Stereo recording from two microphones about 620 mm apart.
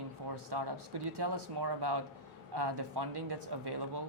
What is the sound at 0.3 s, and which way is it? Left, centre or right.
Speech, right.